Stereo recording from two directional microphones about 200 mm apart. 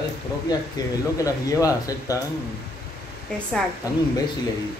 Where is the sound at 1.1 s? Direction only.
15° left (ahead or behind).